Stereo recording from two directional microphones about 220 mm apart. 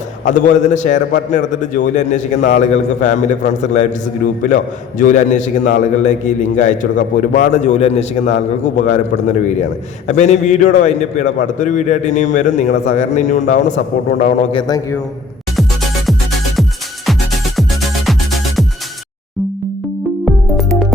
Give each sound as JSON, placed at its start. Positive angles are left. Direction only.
{"t": 0.3, "sound": "a man's voice", "side_deg": 35}
{"t": 14.5, "sound": "a man's voice", "side_deg": 15}
{"t": 17.6, "sound": "music", "side_deg": 0}
{"t": 20.2, "sound": "music", "side_deg": 0}